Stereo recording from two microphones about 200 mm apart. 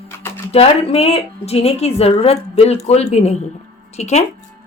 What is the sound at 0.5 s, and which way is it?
A woman's voice, 30° left (ahead or behind).